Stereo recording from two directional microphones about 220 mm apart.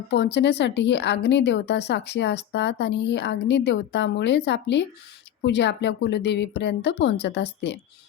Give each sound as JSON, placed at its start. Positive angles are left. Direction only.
{"t": 0.1, "sound": "speech", "side_deg": 50}